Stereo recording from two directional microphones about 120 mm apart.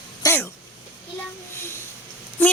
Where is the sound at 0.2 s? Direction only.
30° left (ahead or behind).